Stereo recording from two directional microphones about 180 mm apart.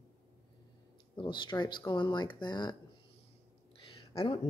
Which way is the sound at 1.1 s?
25° left (ahead or behind).